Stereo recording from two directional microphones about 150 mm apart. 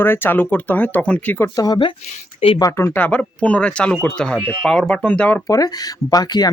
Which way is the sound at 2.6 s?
20° left (ahead or behind).